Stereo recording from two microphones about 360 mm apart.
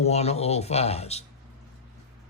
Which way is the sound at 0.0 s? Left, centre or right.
Centre.